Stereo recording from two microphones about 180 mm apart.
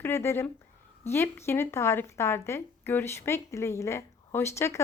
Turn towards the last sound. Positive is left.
turn(degrees=15)  # may be behind; listen again after turning